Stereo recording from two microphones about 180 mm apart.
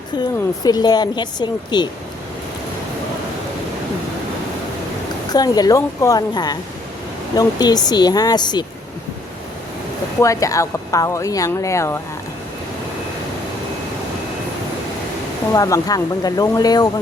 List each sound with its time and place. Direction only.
0.6 s speech: 20° left (ahead or behind)
5.3 s speech: 20° left (ahead or behind)
10.2 s speech: 20° left (ahead or behind)
15.5 s speech: 20° left (ahead or behind)